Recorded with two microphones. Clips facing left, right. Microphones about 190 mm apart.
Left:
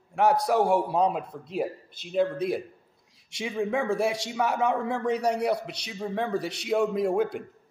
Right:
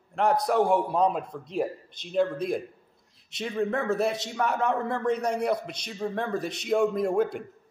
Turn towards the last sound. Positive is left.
turn(degrees=10)  # may be behind; listen again after turning